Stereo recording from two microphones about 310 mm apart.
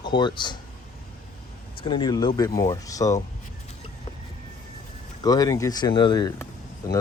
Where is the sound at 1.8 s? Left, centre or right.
Centre.